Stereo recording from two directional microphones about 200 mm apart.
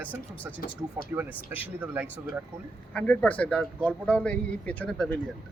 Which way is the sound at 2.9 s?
5° left (ahead or behind).